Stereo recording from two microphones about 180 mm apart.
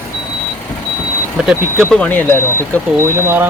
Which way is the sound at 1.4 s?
Centre (ahead or behind).